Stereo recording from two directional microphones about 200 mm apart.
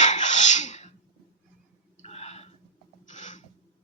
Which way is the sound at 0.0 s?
35° left (ahead or behind).